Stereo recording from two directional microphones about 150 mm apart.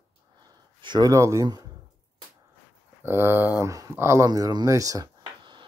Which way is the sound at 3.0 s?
15° right (ahead or behind).